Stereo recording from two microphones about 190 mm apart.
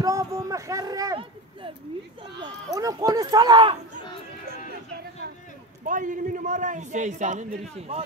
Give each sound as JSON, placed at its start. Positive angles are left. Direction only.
{"t": 0.0, "sound": "a sound", "side_deg": -20}
{"t": 2.4, "sound": "speech", "side_deg": -20}
{"t": 5.9, "sound": "a man's voice", "side_deg": -45}